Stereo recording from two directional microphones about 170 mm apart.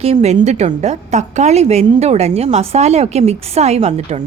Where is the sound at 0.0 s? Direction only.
40° right (ahead or behind).